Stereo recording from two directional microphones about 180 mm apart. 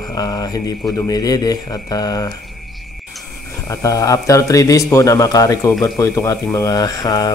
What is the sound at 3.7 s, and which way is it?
Speech, 20° left (ahead or behind).